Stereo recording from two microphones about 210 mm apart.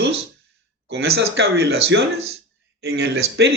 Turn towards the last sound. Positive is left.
turn(degrees=-50)  # may be behind; listen again after turning